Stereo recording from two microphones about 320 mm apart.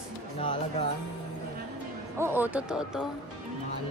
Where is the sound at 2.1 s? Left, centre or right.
Centre.